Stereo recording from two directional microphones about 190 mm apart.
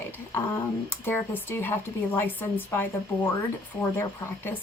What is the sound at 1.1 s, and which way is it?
Speech, 10° left (ahead or behind).